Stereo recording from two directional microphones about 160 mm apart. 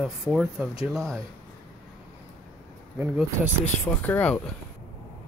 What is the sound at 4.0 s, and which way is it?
Speech, 10° left (ahead or behind).